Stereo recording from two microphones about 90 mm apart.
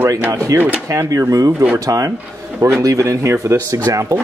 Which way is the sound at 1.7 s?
40° right (ahead or behind).